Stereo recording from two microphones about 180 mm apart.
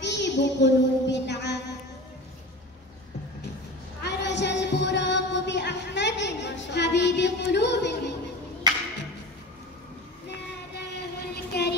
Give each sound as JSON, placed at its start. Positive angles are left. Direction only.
{"t": 0.0, "sound": "child singing", "side_deg": 75}
{"t": 4.0, "sound": "music", "side_deg": 75}
{"t": 11.0, "sound": "a sound", "side_deg": 65}